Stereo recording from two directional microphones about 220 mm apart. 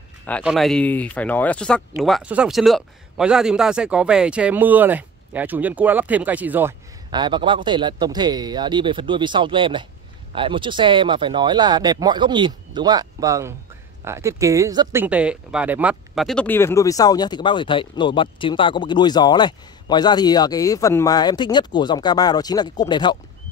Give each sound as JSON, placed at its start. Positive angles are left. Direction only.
{"t": 0.4, "sound": "speech", "side_deg": 0}
{"t": 7.1, "sound": "speech", "side_deg": -20}